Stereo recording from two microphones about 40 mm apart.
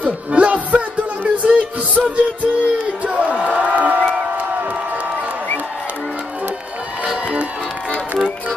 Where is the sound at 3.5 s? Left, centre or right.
Right.